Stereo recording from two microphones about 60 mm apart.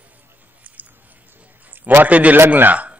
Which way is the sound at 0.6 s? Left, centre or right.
Right.